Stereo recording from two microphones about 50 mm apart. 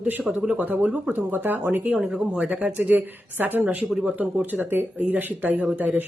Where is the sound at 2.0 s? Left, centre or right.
Centre.